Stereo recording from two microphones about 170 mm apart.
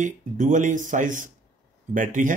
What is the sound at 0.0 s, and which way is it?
Speech, 50° right (ahead or behind).